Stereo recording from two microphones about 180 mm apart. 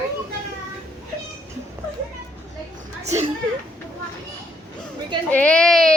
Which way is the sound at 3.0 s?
40° right (ahead or behind).